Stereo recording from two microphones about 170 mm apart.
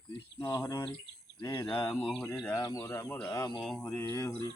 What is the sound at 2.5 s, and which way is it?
Speech, 20° left (ahead or behind).